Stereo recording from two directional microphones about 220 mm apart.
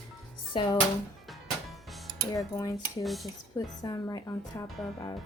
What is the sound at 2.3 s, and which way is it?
Speech, 15° left (ahead or behind).